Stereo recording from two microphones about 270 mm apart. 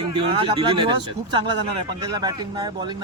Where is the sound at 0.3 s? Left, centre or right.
Centre.